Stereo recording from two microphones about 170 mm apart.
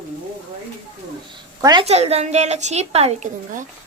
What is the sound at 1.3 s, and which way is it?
Speech, 25° right (ahead or behind).